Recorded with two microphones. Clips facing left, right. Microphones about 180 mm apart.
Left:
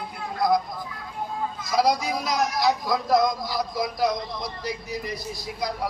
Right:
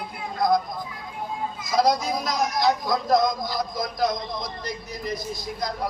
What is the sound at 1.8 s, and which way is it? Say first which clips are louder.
A man's voice: right 1 dB; 5° left (ahead or behind).